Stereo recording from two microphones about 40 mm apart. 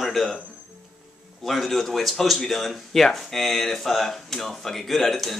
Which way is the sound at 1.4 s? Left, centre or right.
Centre.